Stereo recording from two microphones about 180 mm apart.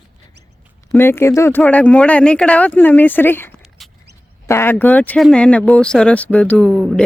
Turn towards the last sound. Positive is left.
turn(degrees=5)  # may be behind; listen again after turning